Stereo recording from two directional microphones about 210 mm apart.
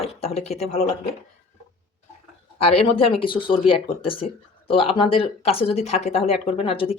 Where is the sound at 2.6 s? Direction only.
30° left (ahead or behind).